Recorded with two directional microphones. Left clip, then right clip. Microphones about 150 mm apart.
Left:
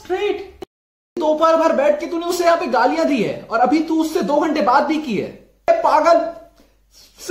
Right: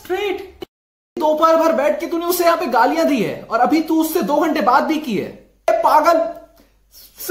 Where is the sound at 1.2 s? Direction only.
15° right (ahead or behind).